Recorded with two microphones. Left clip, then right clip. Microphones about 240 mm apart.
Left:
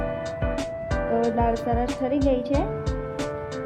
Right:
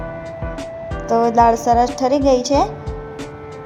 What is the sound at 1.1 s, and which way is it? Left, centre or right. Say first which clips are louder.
Music: right 11 dB; centre.